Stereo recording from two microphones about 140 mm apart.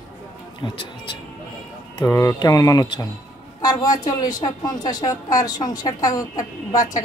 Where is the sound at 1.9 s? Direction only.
25° left (ahead or behind).